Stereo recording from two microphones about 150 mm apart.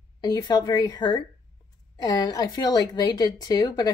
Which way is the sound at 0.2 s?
30° left (ahead or behind).